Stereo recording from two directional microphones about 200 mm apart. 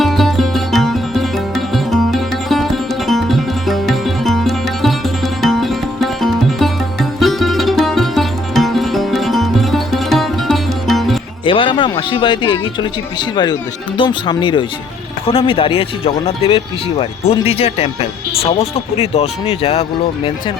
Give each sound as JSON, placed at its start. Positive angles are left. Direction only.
{"t": 0.0, "sound": "music", "side_deg": 0}
{"t": 11.4, "sound": "speech", "side_deg": 25}